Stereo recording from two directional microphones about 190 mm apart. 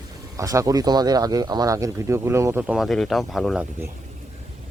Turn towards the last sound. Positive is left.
turn(degrees=0)  # may be behind; listen again after turning